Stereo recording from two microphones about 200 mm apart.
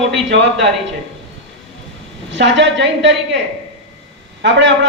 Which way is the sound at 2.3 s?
65° right (ahead or behind).